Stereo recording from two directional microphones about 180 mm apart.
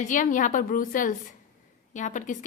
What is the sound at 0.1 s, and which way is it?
A woman's voice, 45° left (ahead or behind).